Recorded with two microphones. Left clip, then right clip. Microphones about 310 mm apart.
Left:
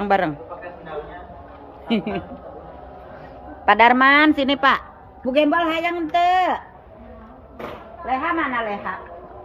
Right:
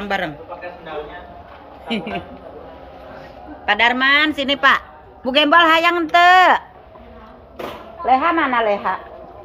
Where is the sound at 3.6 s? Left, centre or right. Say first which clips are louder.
Left 2 dB; centre.